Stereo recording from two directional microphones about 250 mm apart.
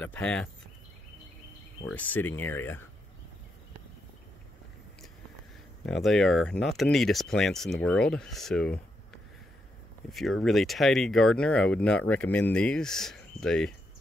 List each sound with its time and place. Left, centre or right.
0.0 s speech: centre
1.9 s speech: centre
5.9 s speech: centre